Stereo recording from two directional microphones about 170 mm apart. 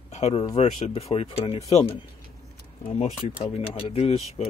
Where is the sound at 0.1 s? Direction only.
35° left (ahead or behind).